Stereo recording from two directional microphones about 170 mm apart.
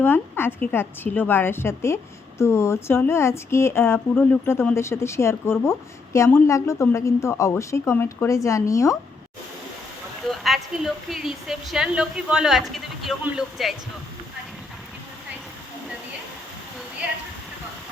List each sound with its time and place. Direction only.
0.0 s speech: 15° left (ahead or behind)
10.2 s speech: centre (ahead or behind)